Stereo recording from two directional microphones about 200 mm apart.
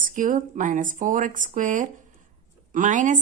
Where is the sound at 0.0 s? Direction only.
40° right (ahead or behind).